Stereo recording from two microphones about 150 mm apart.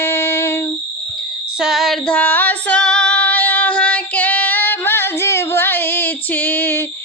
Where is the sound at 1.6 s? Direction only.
5° right (ahead or behind).